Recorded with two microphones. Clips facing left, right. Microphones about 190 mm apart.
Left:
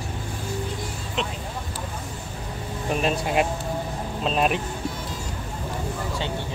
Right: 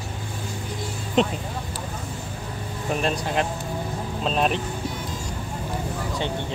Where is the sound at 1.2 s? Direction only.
40° right (ahead or behind).